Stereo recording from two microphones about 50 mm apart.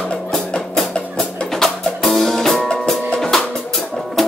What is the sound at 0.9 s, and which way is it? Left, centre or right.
Music, centre.